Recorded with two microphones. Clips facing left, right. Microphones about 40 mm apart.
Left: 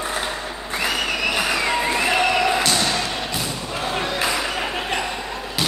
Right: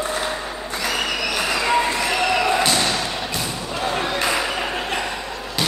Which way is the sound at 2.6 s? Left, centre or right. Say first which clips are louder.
Right 1 dB; centre.